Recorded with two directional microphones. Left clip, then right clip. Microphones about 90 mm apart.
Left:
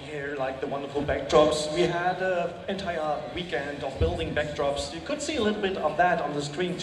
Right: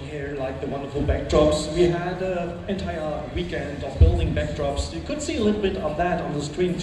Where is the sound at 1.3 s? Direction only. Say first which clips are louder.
Right 1 dB; 20° left (ahead or behind).